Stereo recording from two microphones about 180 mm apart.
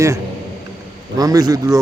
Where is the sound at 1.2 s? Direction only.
20° right (ahead or behind).